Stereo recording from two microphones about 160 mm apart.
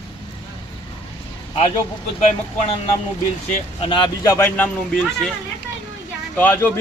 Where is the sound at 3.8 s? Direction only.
35° left (ahead or behind).